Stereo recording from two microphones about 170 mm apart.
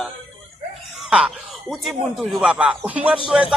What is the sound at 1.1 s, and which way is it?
Speech, 5° right (ahead or behind).